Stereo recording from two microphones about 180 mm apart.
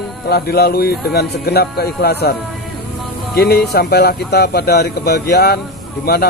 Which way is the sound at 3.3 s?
60° left (ahead or behind).